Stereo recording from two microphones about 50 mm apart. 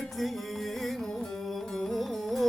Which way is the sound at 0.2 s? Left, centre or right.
Centre.